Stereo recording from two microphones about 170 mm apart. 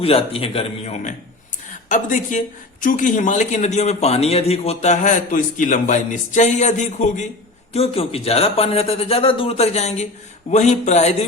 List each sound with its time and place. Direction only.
0.0 s a man's voice: 35° left (ahead or behind)
1.9 s a man's voice: 50° left (ahead or behind)